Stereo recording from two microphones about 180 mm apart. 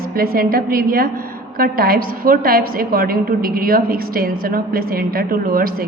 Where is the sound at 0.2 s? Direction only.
55° right (ahead or behind).